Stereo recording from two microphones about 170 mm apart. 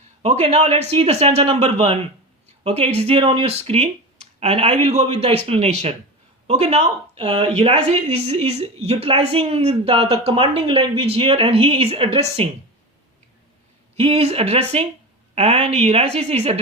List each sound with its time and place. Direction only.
0.2 s speech: 40° right (ahead or behind)
13.9 s speech: 35° right (ahead or behind)